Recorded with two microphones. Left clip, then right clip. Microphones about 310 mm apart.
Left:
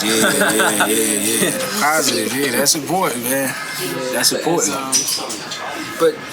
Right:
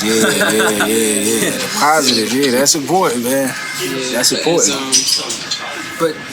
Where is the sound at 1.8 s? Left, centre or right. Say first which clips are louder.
Right 5 dB; centre.